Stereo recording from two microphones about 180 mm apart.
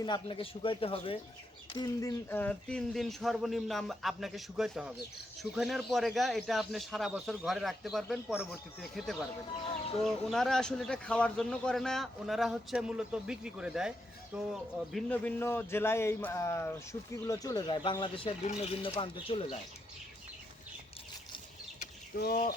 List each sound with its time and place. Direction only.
0.0 s speech: 25° left (ahead or behind); by 9.1 s centre (ahead or behind)
9.6 s speech: 30° left (ahead or behind)
10.0 s speech: centre (ahead or behind)
15.1 s a man's voice: 10° left (ahead or behind); by 19.5 s 30° left (ahead or behind)
22.2 s speech: 55° left (ahead or behind)